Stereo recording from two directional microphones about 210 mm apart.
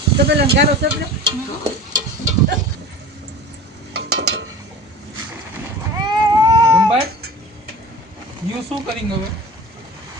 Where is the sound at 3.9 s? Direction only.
55° right (ahead or behind).